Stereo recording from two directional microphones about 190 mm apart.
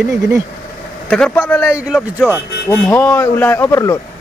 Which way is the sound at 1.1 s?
5° left (ahead or behind).